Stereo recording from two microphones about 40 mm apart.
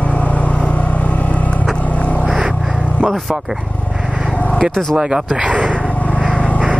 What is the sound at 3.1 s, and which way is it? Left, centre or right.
Dog, centre.